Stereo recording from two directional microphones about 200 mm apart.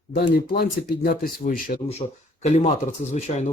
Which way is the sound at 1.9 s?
30° left (ahead or behind).